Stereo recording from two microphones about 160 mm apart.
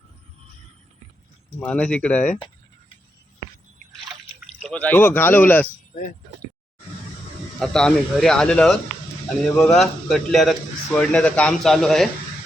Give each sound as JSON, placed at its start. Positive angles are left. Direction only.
{"t": 1.5, "sound": "speech", "side_deg": 5}
{"t": 4.6, "sound": "speech", "side_deg": 10}
{"t": 5.9, "sound": "speech", "side_deg": 60}
{"t": 7.6, "sound": "a man's voice", "side_deg": 5}